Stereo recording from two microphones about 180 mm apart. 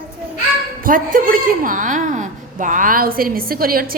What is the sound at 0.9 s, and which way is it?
A woman's voice, 50° right (ahead or behind).